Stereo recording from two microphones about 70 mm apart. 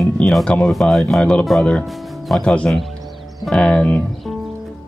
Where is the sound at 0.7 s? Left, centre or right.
Centre.